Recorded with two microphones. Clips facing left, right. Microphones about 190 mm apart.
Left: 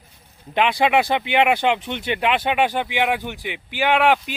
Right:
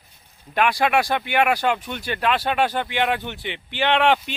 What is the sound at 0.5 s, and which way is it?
Speech, 20° left (ahead or behind).